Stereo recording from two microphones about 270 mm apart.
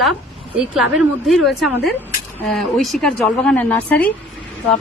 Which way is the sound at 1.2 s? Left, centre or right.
Centre.